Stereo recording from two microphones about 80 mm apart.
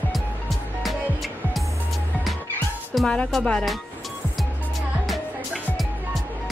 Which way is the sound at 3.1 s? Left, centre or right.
Centre.